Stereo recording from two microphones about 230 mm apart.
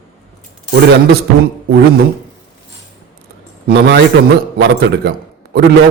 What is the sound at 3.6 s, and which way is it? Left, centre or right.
A man's voice, right.